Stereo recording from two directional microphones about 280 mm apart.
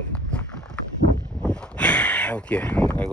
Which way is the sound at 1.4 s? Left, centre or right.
Centre.